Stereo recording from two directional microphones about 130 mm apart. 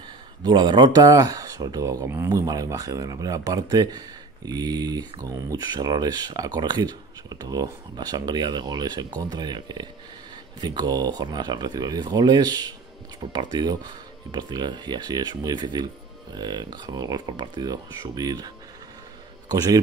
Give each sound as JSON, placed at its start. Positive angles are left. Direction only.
{"t": 0.4, "sound": "speech", "side_deg": -35}
{"t": 19.5, "sound": "speech", "side_deg": -30}